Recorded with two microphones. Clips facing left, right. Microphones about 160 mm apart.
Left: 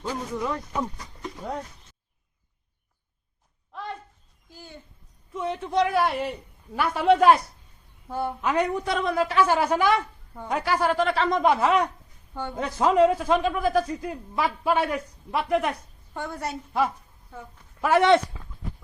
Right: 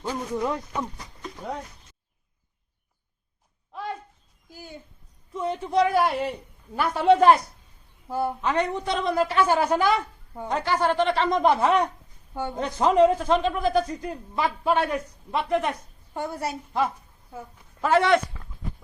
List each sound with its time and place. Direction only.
0.0 s speech: 15° right (ahead or behind)
3.7 s a sound: 5° right (ahead or behind)
4.4 s speech: 10° right (ahead or behind)
5.3 s a man's voice: centre (ahead or behind)
12.3 s speech: 15° right (ahead or behind)
12.5 s a man's voice: centre (ahead or behind)
16.1 s speech: 10° right (ahead or behind)
17.7 s speech: 10° left (ahead or behind)
18.0 s speech: 20° left (ahead or behind)